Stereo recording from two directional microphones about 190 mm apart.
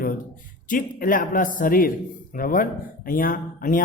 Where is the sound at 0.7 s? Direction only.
45° left (ahead or behind).